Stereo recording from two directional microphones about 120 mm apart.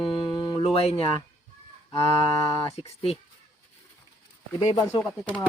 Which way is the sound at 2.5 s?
50° left (ahead or behind).